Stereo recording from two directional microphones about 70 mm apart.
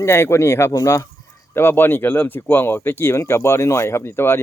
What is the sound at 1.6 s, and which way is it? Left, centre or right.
Speech, left.